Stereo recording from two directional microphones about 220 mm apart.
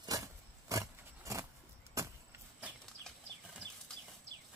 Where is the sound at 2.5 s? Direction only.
5° right (ahead or behind).